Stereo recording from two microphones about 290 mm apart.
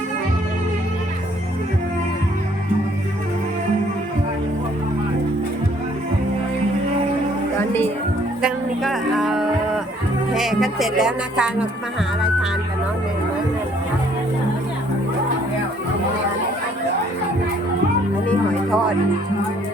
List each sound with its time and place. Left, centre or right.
7.6 s music: centre
8.4 s a sound: centre
10.3 s speech: centre